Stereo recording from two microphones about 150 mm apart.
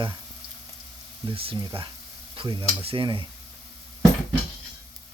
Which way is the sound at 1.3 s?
40° right (ahead or behind).